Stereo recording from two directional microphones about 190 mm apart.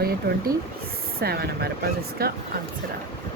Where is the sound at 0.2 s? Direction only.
55° right (ahead or behind).